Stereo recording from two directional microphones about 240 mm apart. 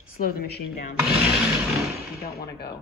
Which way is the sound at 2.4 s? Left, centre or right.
Left.